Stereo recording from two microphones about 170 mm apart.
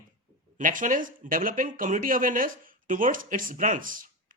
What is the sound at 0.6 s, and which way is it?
Speech, 50° right (ahead or behind).